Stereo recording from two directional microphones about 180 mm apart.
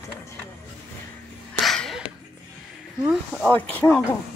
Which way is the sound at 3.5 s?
10° left (ahead or behind).